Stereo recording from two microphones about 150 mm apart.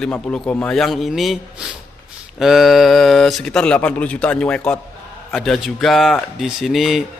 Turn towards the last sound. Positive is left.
turn(degrees=0)  # may be behind; listen again after turning